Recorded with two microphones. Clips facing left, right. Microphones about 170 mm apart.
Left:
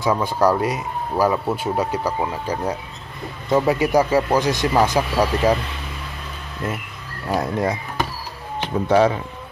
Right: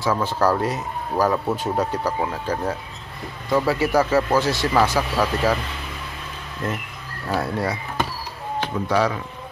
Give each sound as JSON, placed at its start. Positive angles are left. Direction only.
{"t": 0.0, "sound": "speech", "side_deg": 15}
{"t": 6.6, "sound": "speech", "side_deg": 10}